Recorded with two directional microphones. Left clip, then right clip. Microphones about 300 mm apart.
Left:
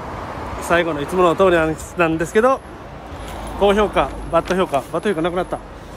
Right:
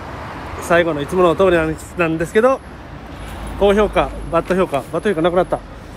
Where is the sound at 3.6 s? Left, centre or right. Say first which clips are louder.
Right 1 dB; centre.